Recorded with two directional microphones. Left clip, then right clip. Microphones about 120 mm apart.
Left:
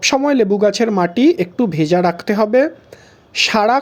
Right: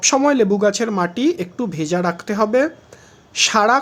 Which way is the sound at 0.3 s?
35° left (ahead or behind).